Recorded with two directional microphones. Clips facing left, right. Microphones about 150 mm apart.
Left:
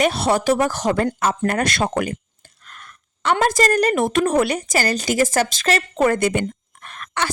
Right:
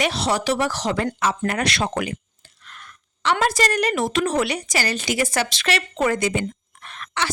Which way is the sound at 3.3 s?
45° left (ahead or behind).